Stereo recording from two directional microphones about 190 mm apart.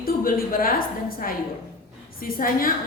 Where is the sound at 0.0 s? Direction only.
50° left (ahead or behind).